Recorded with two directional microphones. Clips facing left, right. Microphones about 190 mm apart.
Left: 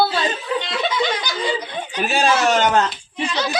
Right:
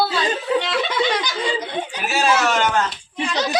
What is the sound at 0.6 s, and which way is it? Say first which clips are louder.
Speech: right 1 dB; 65° right (ahead or behind).